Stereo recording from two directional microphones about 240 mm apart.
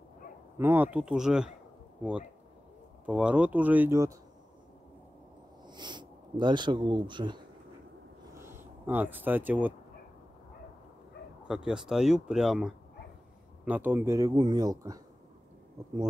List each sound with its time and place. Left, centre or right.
0.6 s speech: centre
3.1 s speech: centre
5.7 s speech: centre
8.4 s speech: centre
11.4 s speech: centre